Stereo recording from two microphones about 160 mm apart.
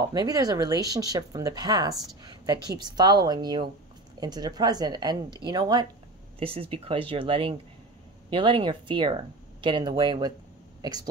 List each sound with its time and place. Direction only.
0.0 s speech: 25° right (ahead or behind)
6.4 s speech: 35° right (ahead or behind)